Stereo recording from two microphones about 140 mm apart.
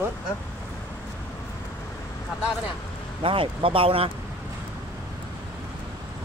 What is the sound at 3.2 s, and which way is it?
Speech, 40° right (ahead or behind).